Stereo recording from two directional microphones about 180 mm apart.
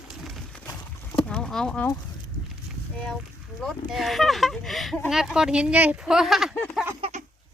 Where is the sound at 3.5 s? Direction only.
Centre (ahead or behind).